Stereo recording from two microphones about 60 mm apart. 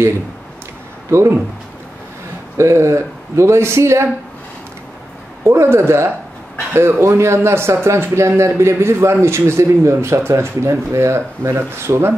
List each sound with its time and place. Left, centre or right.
1.1 s speech: right
2.5 s speech: right
5.4 s speech: right